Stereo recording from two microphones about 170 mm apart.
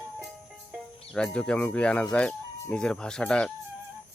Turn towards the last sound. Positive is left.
turn(degrees=5)  # may be behind; listen again after turning